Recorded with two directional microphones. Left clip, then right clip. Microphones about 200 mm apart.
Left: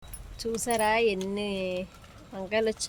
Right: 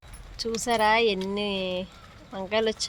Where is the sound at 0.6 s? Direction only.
10° right (ahead or behind).